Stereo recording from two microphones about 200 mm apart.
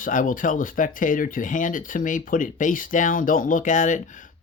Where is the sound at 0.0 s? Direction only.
40° left (ahead or behind).